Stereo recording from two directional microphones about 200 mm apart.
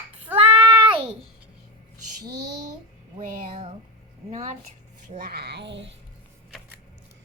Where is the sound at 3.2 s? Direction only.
35° right (ahead or behind).